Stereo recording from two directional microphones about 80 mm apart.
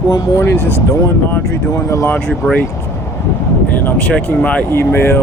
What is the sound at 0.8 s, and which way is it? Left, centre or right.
Speech, left.